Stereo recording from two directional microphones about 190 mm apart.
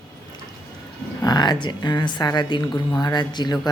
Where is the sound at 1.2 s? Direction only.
20° left (ahead or behind).